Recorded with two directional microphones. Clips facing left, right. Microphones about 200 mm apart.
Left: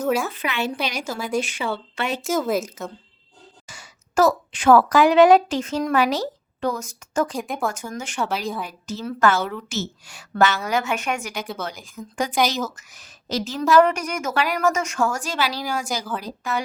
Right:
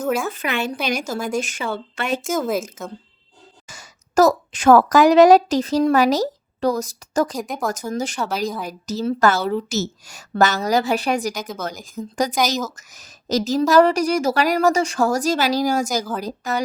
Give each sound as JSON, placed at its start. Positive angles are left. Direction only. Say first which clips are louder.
{"t": 0.3, "sound": "speech", "louder": "right 2 dB", "side_deg": -45}
{"t": 2.2, "sound": "speech", "louder": "left 2 dB", "side_deg": 0}
{"t": 3.8, "sound": "a woman's voice", "louder": "right 3 dB", "side_deg": -40}
{"t": 7.4, "sound": "speech", "louder": "even", "side_deg": 0}
{"t": 7.7, "sound": "a woman's voice", "louder": "right 7 dB", "side_deg": -40}